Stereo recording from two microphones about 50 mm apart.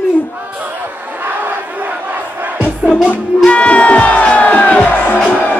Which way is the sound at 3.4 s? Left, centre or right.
Left.